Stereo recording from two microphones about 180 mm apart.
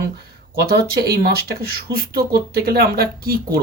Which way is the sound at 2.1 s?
55° right (ahead or behind).